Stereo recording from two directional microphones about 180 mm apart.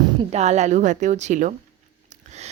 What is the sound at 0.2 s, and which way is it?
A woman's voice, 35° right (ahead or behind).